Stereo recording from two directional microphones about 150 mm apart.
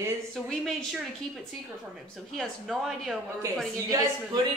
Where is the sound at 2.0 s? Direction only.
Centre (ahead or behind).